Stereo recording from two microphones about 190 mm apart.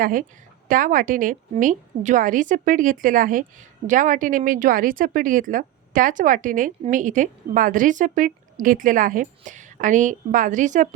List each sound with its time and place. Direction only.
0.0 s a woman's voice: 45° right (ahead or behind)